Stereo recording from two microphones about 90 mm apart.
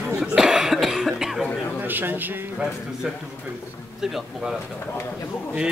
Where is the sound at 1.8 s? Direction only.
20° right (ahead or behind).